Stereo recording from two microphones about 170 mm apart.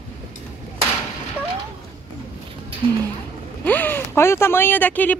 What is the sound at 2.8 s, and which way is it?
Speech, 35° right (ahead or behind).